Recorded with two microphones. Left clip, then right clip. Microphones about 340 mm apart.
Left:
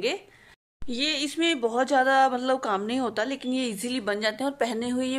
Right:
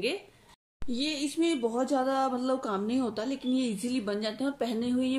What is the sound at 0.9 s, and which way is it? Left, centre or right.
A woman's voice, left.